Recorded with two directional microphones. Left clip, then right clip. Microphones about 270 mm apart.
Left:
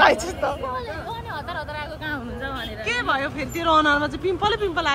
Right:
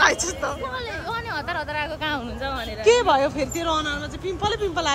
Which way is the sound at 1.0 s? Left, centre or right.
Right.